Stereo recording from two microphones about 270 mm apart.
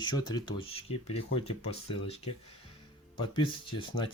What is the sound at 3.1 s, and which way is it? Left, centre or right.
Speech, centre.